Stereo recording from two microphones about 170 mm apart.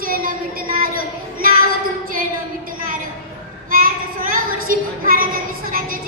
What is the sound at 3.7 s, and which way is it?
Child singing, 55° right (ahead or behind).